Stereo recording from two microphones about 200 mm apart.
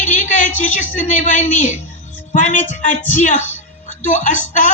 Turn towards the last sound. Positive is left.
turn(degrees=35)  # may be behind; listen again after turning